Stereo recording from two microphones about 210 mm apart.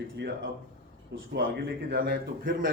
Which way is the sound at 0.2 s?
55° right (ahead or behind).